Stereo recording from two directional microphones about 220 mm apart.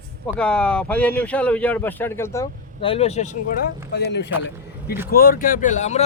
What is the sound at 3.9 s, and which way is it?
A man's voice, 50° left (ahead or behind).